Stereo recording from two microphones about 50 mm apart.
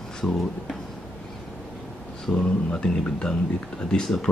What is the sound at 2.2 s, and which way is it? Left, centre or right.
Speech, centre.